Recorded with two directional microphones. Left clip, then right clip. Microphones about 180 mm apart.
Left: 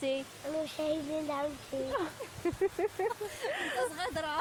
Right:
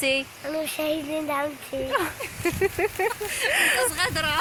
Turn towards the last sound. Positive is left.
turn(degrees=25)  # may be behind; listen again after turning